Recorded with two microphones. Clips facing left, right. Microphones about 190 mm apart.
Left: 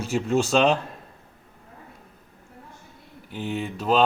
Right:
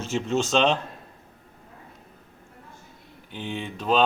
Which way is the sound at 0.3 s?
5° left (ahead or behind).